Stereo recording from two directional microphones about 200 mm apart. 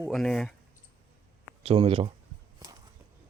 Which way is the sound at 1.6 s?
30° right (ahead or behind).